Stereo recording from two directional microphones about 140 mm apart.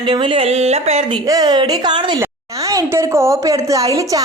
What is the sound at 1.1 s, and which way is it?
Speech, 30° right (ahead or behind).